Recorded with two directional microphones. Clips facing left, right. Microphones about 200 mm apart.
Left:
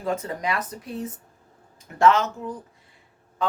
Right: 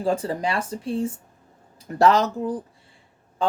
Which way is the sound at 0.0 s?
30° right (ahead or behind).